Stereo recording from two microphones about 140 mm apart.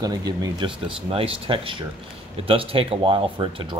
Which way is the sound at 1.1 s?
40° right (ahead or behind).